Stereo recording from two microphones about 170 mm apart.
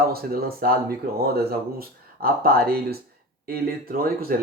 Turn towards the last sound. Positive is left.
turn(degrees=-60)  # may be behind; listen again after turning